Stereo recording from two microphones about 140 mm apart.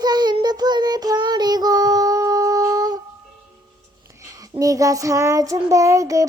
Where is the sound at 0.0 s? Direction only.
30° right (ahead or behind).